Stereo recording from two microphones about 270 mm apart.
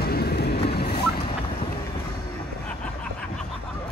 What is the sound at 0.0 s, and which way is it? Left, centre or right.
Vehicle, left.